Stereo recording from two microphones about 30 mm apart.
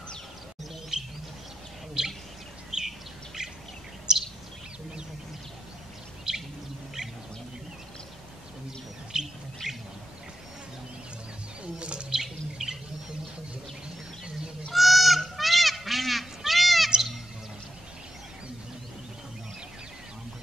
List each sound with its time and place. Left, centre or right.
0.9 s bird: right
3.4 s bird vocalization: right
4.1 s a sound: right
6.3 s bird vocalization: right
9.1 s bird: right
11.6 s bird: right
12.1 s bird: centre
14.7 s goose: centre